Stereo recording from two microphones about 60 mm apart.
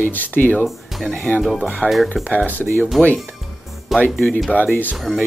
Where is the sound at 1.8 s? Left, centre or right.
Left.